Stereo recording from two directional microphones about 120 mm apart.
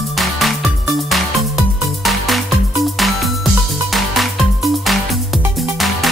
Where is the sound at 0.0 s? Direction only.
Centre (ahead or behind).